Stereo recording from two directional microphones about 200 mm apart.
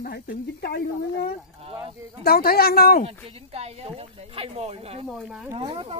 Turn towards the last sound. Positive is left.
turn(degrees=-30)  # may be behind; listen again after turning